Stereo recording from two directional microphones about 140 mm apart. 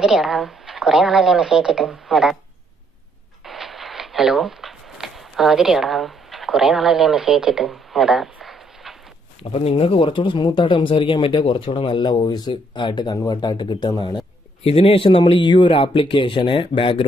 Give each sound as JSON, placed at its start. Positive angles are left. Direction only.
{"t": 0.0, "sound": "speech", "side_deg": -5}
{"t": 3.4, "sound": "zipper", "side_deg": 0}
{"t": 9.4, "sound": "speech", "side_deg": 45}